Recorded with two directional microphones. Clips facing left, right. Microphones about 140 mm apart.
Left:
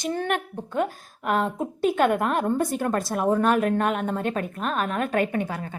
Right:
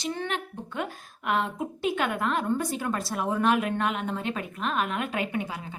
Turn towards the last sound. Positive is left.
turn(degrees=50)  # may be behind; listen again after turning